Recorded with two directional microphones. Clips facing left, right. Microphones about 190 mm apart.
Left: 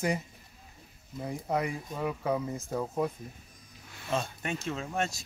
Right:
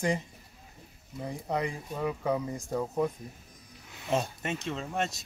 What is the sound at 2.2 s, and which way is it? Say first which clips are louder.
Speech: right 1 dB; 10° right (ahead or behind).